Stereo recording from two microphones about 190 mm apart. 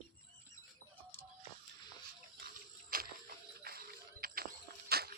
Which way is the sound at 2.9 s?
45° right (ahead or behind).